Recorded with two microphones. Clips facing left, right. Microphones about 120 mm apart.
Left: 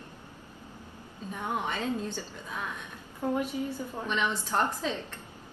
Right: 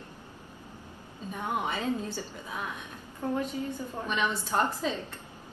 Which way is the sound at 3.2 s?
15° left (ahead or behind).